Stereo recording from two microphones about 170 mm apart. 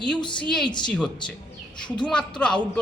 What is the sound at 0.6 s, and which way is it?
Speech, 25° left (ahead or behind).